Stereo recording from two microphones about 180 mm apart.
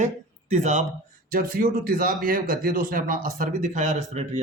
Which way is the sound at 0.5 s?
40° right (ahead or behind).